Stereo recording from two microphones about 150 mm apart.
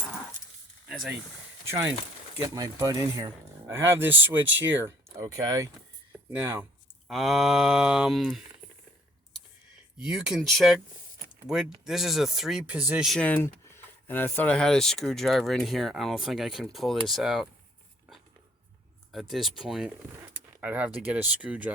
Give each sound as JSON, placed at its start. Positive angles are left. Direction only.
{"t": 0.9, "sound": "a sound", "side_deg": 0}
{"t": 1.6, "sound": "speech", "side_deg": -15}
{"t": 4.0, "sound": "speech", "side_deg": -15}
{"t": 7.1, "sound": "speech", "side_deg": 0}
{"t": 10.0, "sound": "speech", "side_deg": -5}
{"t": 13.1, "sound": "speech", "side_deg": 10}
{"t": 19.1, "sound": "speech", "side_deg": 0}